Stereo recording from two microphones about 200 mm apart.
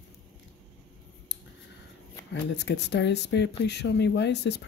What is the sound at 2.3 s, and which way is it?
Speech, 60° left (ahead or behind).